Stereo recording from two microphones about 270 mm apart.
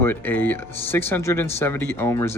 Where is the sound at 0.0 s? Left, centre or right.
Centre.